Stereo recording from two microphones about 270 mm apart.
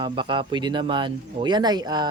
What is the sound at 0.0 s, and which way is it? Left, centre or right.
Speech, centre.